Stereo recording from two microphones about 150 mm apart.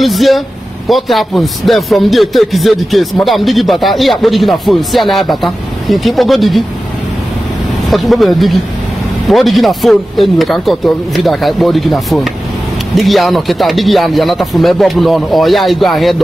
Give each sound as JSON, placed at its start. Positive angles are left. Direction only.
{"t": 0.0, "sound": "speech", "side_deg": 0}
{"t": 7.9, "sound": "speech", "side_deg": 0}